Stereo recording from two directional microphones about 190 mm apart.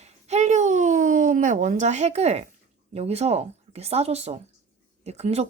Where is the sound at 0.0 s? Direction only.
35° right (ahead or behind).